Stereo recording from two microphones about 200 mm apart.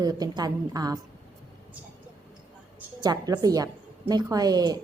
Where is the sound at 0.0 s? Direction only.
20° right (ahead or behind).